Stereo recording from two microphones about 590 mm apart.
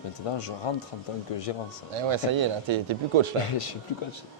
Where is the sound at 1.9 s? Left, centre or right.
Right.